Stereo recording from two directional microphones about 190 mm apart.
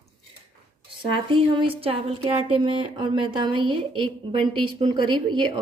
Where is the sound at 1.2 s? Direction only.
25° right (ahead or behind).